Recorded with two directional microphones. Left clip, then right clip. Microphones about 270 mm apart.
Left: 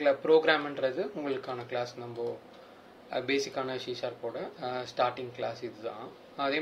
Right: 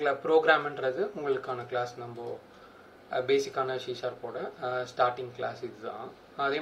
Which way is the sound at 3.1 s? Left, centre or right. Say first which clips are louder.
Right 4 dB; left.